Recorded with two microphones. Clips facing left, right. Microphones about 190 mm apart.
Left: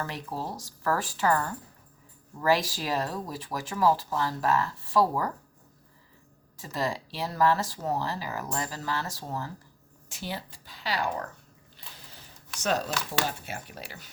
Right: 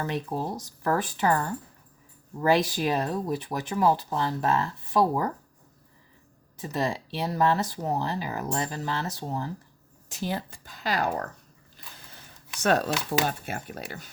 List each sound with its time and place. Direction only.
0.0 s speech: 20° right (ahead or behind)
6.6 s speech: 25° right (ahead or behind)
10.1 s speech: 45° right (ahead or behind)
11.8 s a sound: 45° right (ahead or behind)
13.2 s speech: 50° right (ahead or behind)